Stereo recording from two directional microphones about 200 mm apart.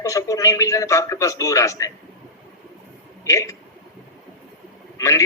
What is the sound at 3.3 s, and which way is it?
Speech, 15° left (ahead or behind).